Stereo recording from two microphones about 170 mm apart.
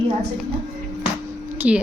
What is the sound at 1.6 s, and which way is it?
Speech, 5° right (ahead or behind).